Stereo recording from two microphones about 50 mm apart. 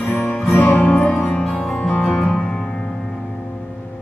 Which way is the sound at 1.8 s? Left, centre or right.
Left.